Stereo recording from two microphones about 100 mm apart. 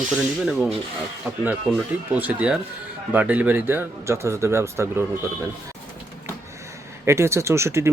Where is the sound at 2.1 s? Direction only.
15° right (ahead or behind).